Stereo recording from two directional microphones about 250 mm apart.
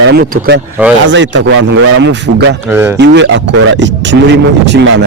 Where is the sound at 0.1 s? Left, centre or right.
Right.